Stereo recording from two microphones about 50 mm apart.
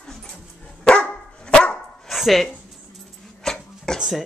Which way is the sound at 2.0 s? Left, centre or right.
Centre.